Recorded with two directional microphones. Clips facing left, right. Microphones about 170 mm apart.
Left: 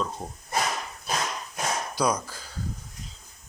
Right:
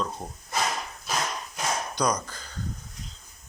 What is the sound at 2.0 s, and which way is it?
Speech, 5° left (ahead or behind).